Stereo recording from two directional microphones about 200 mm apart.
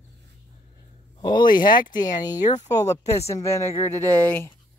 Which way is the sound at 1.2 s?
20° left (ahead or behind).